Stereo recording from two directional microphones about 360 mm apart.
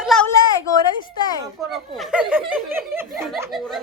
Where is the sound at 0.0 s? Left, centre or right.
Centre.